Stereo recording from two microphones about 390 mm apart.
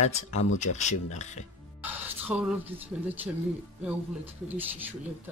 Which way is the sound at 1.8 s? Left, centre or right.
Centre.